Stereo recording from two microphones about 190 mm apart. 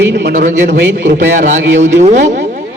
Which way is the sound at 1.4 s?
40° right (ahead or behind).